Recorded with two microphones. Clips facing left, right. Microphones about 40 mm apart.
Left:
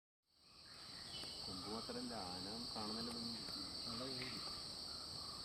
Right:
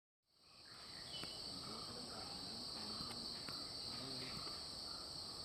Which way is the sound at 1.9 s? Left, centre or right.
Centre.